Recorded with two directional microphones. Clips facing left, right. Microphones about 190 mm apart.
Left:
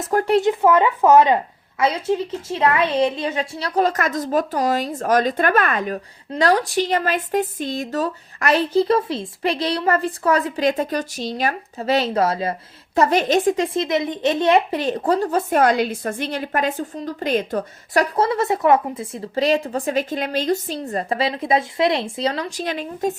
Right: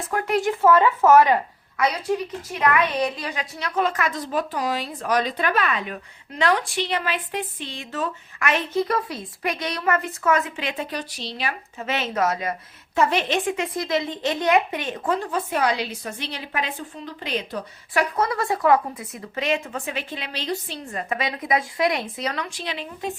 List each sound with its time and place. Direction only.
0.1 s a woman's voice: 35° left (ahead or behind)
13.0 s a woman's voice: 40° left (ahead or behind)
13.7 s a woman's voice: 20° left (ahead or behind); by 23.1 s 45° left (ahead or behind)